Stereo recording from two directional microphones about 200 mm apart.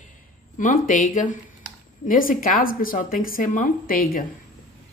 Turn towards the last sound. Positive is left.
turn(degrees=45)  # may be behind; listen again after turning